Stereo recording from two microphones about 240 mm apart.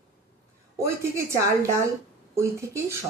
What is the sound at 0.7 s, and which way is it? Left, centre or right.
Speech, centre.